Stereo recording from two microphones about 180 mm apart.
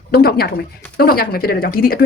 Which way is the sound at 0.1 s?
60° left (ahead or behind).